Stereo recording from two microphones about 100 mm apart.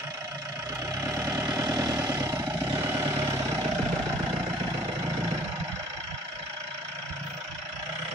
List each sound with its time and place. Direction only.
1.0 s vehicle: 30° right (ahead or behind)